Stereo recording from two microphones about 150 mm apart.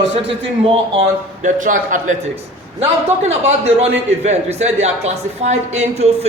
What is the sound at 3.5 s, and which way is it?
A man's voice, 45° right (ahead or behind).